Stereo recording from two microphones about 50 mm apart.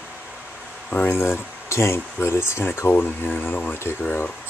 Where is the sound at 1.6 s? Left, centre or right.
Left.